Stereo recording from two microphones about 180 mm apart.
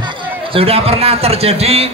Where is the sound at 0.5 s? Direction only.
35° right (ahead or behind).